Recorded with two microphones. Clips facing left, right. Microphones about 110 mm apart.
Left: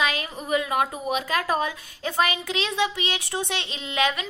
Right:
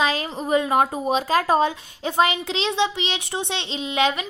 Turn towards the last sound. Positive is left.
turn(degrees=-25)  # may be behind; listen again after turning